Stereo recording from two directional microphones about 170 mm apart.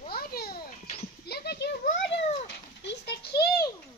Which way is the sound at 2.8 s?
90° left.